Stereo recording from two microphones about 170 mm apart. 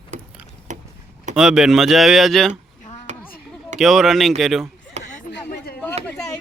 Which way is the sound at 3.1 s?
45° right (ahead or behind).